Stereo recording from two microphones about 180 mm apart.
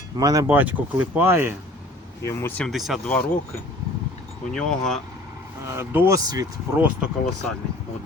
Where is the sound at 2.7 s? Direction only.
Centre (ahead or behind).